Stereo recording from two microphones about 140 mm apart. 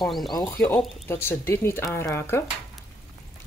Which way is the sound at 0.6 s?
15° left (ahead or behind).